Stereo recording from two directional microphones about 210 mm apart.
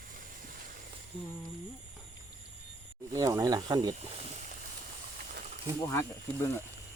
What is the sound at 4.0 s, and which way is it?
Snake, 30° right (ahead or behind).